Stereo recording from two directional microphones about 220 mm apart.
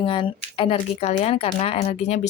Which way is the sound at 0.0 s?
25° left (ahead or behind).